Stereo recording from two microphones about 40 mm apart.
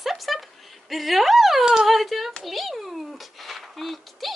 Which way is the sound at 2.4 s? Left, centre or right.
Centre.